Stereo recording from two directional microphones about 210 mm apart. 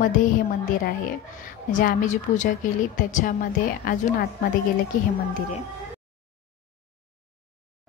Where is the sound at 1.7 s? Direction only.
35° left (ahead or behind).